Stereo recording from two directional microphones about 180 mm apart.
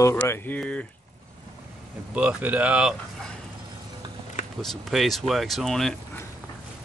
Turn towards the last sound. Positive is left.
turn(degrees=0)  # may be behind; listen again after turning